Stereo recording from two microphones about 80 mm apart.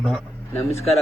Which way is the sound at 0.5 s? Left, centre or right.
Left.